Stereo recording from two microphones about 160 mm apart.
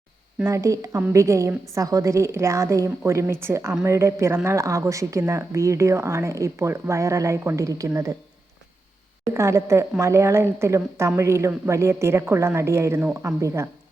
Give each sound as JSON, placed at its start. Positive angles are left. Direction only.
{"t": 0.3, "sound": "a woman's voice", "side_deg": -20}
{"t": 9.3, "sound": "a woman's voice", "side_deg": -15}